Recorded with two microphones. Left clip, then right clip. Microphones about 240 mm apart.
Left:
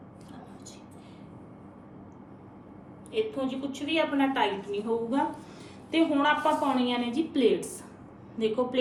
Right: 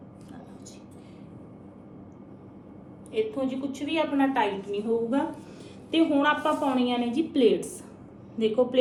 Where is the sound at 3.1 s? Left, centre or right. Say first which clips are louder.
Right 2 dB; centre.